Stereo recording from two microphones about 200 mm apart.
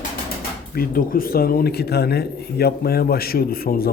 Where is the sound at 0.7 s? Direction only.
45° left (ahead or behind).